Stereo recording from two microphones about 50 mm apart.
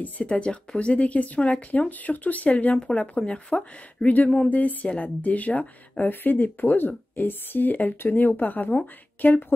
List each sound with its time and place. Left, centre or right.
0.0 s a woman's voice: left